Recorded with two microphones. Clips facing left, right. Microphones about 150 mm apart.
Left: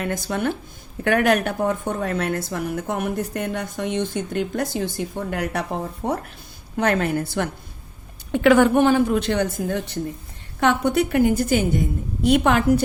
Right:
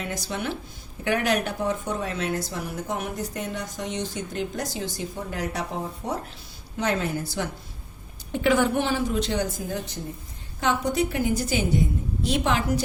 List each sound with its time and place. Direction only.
0.0 s a woman's voice: 55° left (ahead or behind)